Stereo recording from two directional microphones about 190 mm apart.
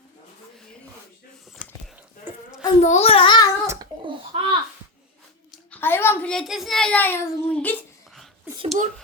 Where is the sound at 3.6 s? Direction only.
15° right (ahead or behind).